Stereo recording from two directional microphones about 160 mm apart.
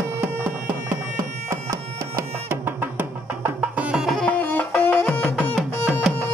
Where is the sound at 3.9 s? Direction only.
Centre (ahead or behind).